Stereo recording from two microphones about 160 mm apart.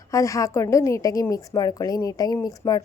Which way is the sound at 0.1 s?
20° left (ahead or behind).